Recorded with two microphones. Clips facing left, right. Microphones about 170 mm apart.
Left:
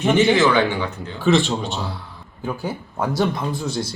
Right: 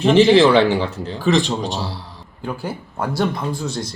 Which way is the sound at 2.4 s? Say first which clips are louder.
Even; centre (ahead or behind).